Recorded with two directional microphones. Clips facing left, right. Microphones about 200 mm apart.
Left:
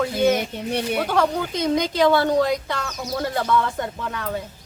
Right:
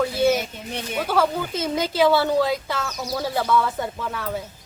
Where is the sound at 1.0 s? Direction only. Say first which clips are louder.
Left 1 dB; 5° right (ahead or behind).